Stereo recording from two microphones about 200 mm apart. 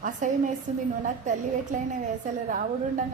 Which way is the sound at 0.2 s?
40° right (ahead or behind).